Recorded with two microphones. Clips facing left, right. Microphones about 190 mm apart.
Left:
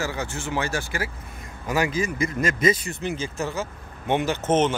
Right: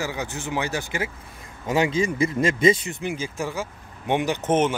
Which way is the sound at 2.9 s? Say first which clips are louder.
Even; 10° right (ahead or behind).